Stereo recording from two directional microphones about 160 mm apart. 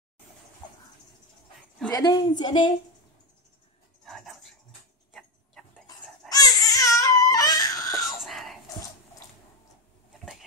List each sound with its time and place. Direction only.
1.9 s speech: 25° left (ahead or behind)
4.0 s a sound: centre (ahead or behind)
6.2 s baby cry: 25° left (ahead or behind)
8.2 s whispering: centre (ahead or behind)
10.1 s bee: centre (ahead or behind)